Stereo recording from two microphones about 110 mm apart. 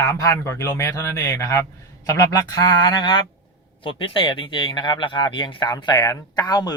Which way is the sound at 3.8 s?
50° left (ahead or behind).